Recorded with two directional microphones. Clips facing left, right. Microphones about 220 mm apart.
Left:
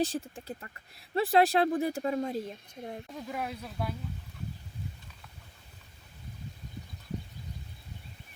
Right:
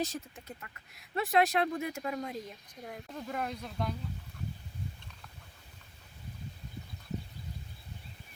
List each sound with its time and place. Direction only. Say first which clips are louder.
0.0 s speech: left 5 dB; 30° left (ahead or behind)
3.1 s speech: right 2 dB; 5° left (ahead or behind)